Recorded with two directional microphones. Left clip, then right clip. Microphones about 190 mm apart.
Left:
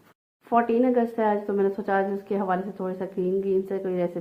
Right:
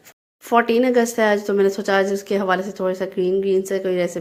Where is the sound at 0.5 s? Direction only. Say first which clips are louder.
Right 5 dB; 30° right (ahead or behind).